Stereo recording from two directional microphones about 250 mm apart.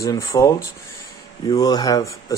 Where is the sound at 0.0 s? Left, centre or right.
Centre.